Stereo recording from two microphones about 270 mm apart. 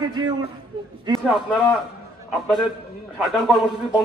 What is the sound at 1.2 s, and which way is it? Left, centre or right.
Speech, centre.